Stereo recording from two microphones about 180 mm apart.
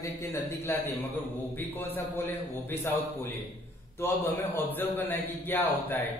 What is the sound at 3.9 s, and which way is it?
A man's voice, 10° left (ahead or behind).